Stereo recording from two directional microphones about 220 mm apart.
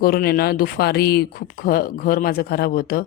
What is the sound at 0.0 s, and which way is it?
Speech, 45° left (ahead or behind).